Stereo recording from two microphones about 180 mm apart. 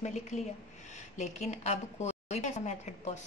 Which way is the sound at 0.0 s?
40° left (ahead or behind).